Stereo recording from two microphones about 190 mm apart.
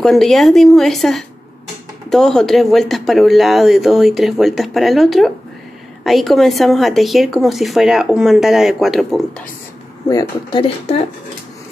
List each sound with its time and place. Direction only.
0.0 s speech: centre (ahead or behind)
10.0 s speech: 20° left (ahead or behind)